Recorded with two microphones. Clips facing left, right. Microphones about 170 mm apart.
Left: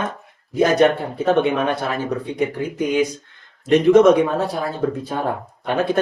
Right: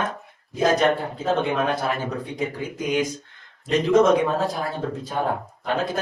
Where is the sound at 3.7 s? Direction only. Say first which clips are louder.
Left 5 dB; 70° left (ahead or behind).